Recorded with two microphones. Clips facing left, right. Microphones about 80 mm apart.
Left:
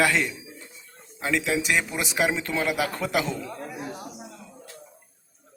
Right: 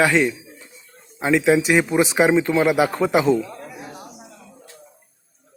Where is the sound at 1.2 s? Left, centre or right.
Right.